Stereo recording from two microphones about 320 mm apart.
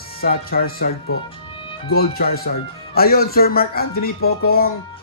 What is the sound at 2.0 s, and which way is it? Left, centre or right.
Speech, left.